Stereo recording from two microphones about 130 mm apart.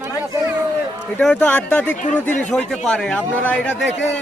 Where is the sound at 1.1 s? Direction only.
10° left (ahead or behind).